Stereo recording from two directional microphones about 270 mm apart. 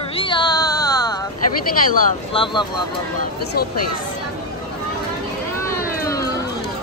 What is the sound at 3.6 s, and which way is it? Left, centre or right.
Speech, left.